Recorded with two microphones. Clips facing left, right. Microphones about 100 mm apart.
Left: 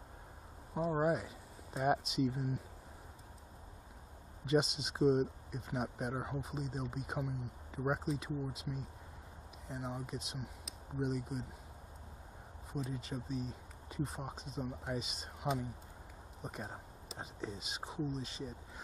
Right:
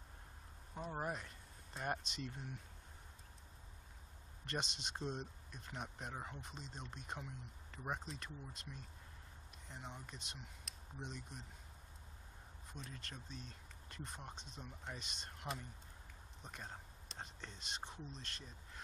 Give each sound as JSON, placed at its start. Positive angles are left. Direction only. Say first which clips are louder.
{"t": 1.0, "sound": "speech", "louder": "left 11 dB", "side_deg": 5}
{"t": 4.5, "sound": "speech", "louder": "left 12 dB", "side_deg": 5}
{"t": 12.7, "sound": "speech", "louder": "left 13 dB", "side_deg": 5}